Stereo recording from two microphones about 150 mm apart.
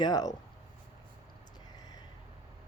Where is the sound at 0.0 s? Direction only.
25° left (ahead or behind).